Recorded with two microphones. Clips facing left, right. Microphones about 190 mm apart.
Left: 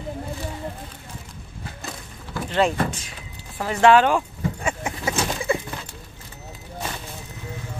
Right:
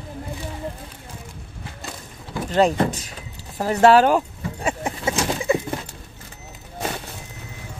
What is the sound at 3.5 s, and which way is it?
Vehicle, 40° right (ahead or behind).